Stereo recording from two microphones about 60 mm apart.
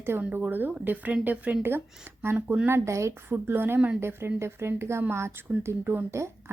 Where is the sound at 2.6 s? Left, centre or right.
Right.